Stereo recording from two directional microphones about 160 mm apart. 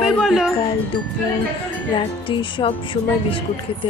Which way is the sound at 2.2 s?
35° left (ahead or behind).